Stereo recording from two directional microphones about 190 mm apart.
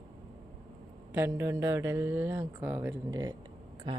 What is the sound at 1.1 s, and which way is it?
Speech, 10° right (ahead or behind).